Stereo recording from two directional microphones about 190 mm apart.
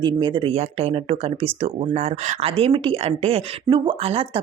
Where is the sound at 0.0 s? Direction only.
25° right (ahead or behind).